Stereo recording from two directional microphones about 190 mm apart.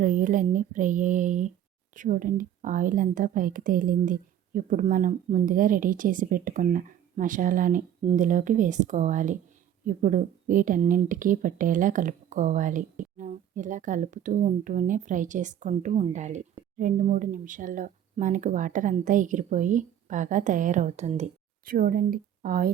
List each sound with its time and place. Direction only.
0.0 s a woman's voice: 45° right (ahead or behind)